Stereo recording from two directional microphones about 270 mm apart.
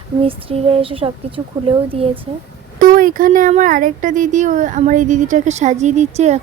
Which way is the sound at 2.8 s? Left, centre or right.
Right.